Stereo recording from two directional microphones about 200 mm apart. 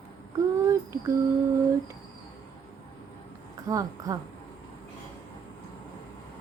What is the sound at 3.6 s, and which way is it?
Speech, 15° right (ahead or behind).